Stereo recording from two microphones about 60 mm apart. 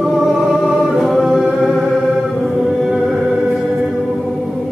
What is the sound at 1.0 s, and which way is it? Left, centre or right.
Music, centre.